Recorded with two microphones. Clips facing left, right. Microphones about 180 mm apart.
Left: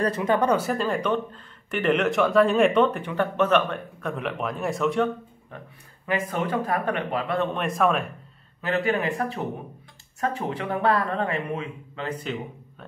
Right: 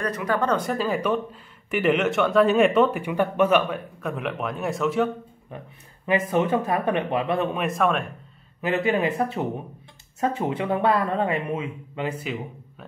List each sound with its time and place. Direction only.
0.0 s speech: 25° left (ahead or behind)
0.5 s speech: 5° left (ahead or behind)
6.0 s speech: 20° right (ahead or behind)
7.5 s speech: centre (ahead or behind)
8.5 s speech: 20° right (ahead or behind)